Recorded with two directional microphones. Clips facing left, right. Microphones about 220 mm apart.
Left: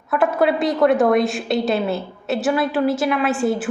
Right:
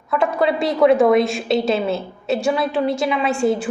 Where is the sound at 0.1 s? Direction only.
5° left (ahead or behind).